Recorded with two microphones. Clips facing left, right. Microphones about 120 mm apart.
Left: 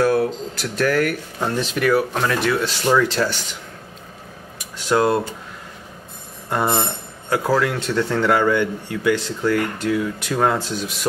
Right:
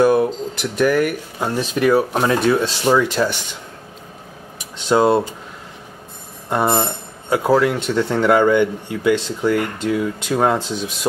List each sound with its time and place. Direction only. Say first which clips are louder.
0.0 s speech: right 3 dB; 20° right (ahead or behind)
1.9 s speech: right 3 dB; 20° right (ahead or behind)
4.7 s speech: right 3 dB; 25° right (ahead or behind)
6.5 s speech: right 3 dB; 20° right (ahead or behind)